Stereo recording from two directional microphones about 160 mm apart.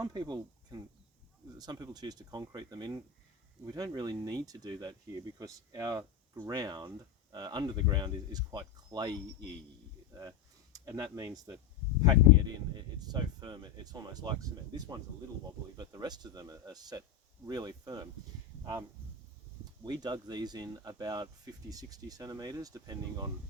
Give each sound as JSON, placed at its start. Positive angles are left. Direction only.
{"t": 0.0, "sound": "speech", "side_deg": -25}
{"t": 19.8, "sound": "speech", "side_deg": -25}